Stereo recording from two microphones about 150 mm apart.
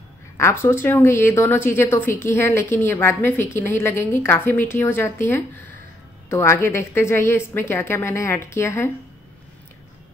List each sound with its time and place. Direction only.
0.4 s a woman's voice: 15° left (ahead or behind)